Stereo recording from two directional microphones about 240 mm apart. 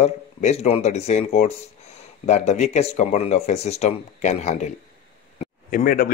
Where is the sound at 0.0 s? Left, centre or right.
Left.